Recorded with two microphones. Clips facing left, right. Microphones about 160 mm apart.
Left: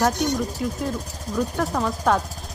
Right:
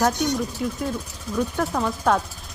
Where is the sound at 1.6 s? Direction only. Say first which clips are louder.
Even; centre (ahead or behind).